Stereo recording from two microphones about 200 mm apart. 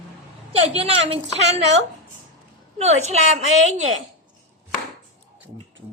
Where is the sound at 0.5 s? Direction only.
30° right (ahead or behind).